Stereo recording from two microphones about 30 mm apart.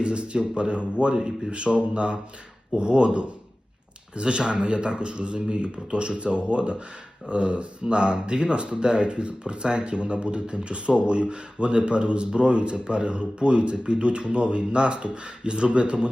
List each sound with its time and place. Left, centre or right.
0.0 s speech: right